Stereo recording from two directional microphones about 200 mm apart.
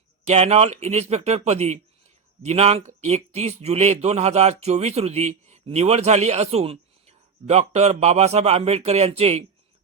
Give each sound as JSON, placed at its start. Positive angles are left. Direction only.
{"t": 0.3, "sound": "speech", "side_deg": -30}